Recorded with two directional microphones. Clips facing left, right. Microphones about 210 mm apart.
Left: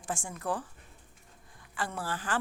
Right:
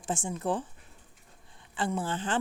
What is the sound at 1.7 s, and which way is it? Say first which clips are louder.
Speech: right 5 dB; 20° right (ahead or behind).